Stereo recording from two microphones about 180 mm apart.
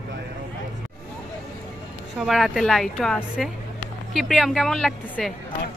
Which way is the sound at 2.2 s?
Centre (ahead or behind).